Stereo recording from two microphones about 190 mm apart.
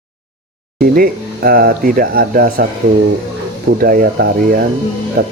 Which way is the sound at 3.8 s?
50° right (ahead or behind).